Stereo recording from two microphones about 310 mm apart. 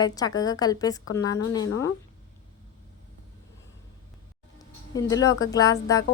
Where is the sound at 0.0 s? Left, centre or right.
Centre.